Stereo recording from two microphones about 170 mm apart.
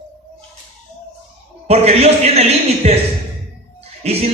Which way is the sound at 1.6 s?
35° right (ahead or behind).